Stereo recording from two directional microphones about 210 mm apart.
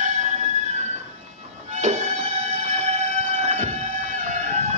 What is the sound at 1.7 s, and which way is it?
Music, 35° right (ahead or behind).